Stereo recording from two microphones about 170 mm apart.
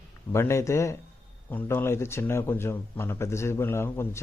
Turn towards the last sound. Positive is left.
turn(degrees=15)  # may be behind; listen again after turning